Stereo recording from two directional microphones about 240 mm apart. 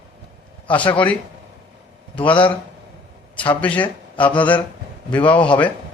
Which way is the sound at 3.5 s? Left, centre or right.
Centre.